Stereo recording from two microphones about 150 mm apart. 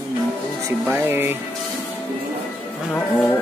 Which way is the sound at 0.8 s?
15° right (ahead or behind).